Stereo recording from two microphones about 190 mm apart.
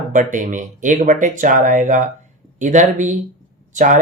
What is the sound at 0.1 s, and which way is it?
Speech, 40° right (ahead or behind).